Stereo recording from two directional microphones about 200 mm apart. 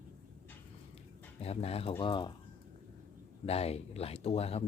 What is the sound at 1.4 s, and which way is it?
Speech, 30° left (ahead or behind).